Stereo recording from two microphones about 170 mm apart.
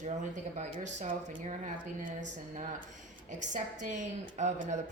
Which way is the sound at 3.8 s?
45° right (ahead or behind).